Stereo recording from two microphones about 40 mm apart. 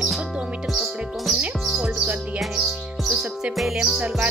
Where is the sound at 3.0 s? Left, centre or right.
Centre.